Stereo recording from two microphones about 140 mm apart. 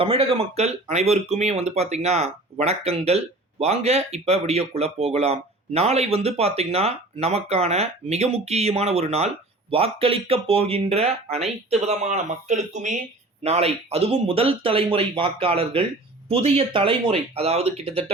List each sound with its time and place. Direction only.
0.0 s speech: 40° right (ahead or behind); by 13.0 s 60° right (ahead or behind)
13.4 s speech: 50° right (ahead or behind)